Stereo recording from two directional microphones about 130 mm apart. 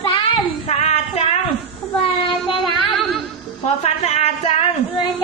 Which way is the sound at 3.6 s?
55° left (ahead or behind).